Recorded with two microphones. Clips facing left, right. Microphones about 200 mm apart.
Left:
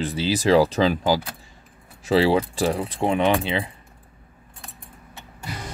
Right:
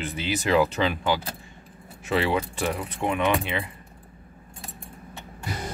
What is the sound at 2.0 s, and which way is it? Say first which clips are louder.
Speech: left 6 dB; 30° left (ahead or behind).